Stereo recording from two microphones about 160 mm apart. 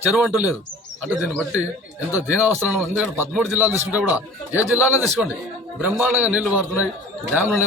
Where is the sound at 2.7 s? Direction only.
10° right (ahead or behind).